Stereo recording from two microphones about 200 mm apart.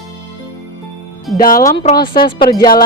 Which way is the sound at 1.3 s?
45° left (ahead or behind).